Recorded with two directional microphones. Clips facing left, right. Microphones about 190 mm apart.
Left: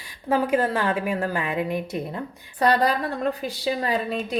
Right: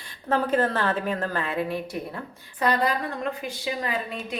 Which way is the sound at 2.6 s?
35° left (ahead or behind).